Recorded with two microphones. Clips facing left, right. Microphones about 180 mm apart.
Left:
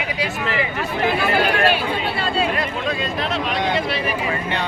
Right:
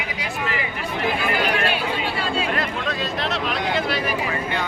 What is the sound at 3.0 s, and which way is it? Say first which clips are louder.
Speech: left 2 dB; centre (ahead or behind).